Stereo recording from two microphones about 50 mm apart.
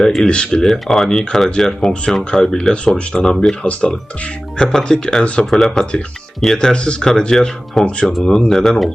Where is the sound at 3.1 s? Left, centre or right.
Centre.